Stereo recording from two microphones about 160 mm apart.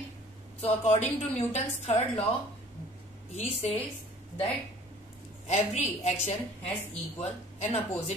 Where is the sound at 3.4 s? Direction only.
45° left (ahead or behind).